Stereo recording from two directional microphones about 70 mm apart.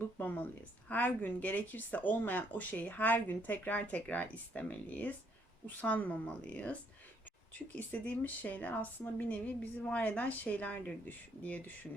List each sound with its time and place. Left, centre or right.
0.2 s a woman's voice: left
7.8 s speech: left